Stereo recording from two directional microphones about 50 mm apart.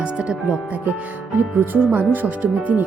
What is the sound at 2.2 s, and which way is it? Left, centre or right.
Speech, right.